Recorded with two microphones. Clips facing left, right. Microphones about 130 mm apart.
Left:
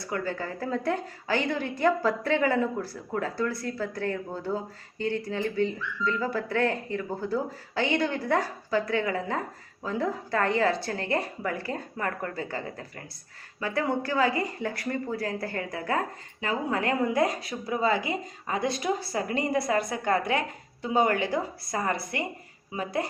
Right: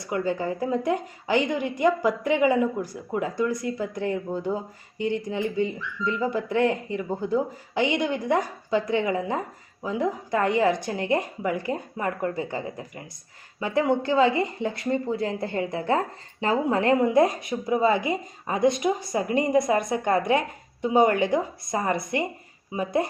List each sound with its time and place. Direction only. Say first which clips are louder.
0.0 s a woman's voice: right 5 dB; 20° right (ahead or behind)